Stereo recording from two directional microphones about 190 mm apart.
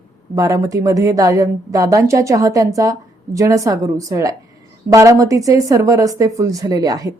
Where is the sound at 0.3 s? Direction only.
15° right (ahead or behind).